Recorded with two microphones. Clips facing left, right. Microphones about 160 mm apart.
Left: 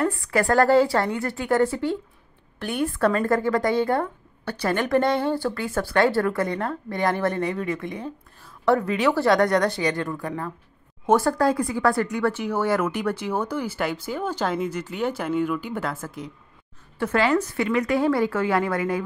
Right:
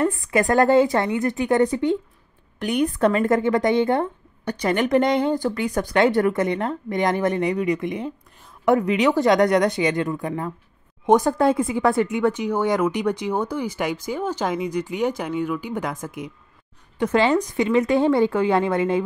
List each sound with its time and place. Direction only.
0.0 s a woman's voice: 20° right (ahead or behind)
15.2 s speech: 5° left (ahead or behind)
15.6 s a woman's voice: 15° right (ahead or behind)